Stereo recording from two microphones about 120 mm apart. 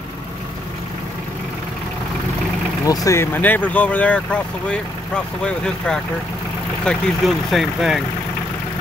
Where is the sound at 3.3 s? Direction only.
15° left (ahead or behind); by 8.0 s centre (ahead or behind).